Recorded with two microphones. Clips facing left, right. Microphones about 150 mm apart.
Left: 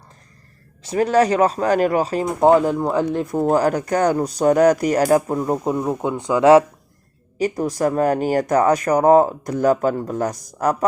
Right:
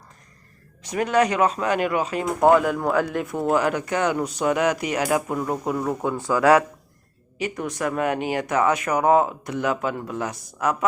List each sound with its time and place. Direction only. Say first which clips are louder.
0.8 s speech: left 4 dB; 30° left (ahead or behind)
5.4 s speech: left 4 dB; 25° left (ahead or behind)
7.3 s speech: left 7 dB; 40° left (ahead or behind)